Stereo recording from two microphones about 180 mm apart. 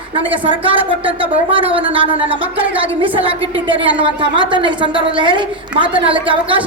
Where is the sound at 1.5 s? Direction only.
30° right (ahead or behind).